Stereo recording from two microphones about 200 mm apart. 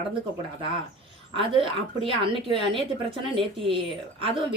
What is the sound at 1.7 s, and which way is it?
A woman's voice, 25° right (ahead or behind).